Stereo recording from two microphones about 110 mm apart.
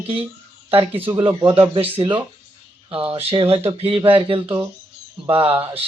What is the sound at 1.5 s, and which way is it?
Speech, 55° right (ahead or behind).